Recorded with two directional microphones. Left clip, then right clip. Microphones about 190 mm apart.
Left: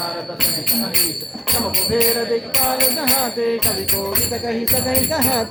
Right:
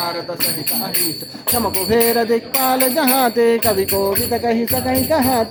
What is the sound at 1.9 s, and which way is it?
Music, 55° right (ahead or behind).